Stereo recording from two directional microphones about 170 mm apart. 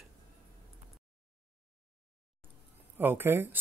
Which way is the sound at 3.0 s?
10° right (ahead or behind).